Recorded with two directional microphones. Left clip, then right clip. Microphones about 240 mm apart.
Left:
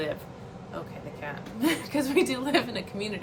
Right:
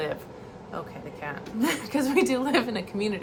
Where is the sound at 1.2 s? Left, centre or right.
Centre.